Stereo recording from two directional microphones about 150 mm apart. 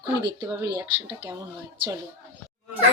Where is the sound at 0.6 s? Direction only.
30° right (ahead or behind).